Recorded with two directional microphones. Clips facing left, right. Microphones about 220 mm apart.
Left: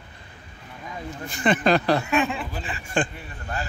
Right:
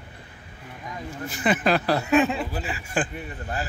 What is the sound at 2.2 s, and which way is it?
Speech, 40° right (ahead or behind).